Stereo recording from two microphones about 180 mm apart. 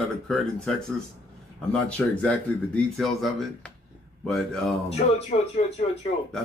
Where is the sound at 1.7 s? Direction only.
5° left (ahead or behind).